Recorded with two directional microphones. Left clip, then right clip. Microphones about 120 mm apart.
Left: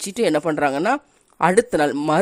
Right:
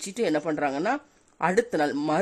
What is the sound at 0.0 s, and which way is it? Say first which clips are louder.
Speech: left 7 dB; 35° left (ahead or behind).